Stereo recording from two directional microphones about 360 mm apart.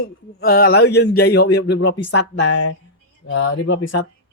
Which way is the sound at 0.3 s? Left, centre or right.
Left.